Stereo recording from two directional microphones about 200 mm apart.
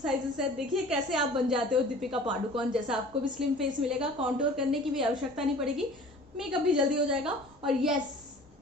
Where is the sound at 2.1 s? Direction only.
25° right (ahead or behind).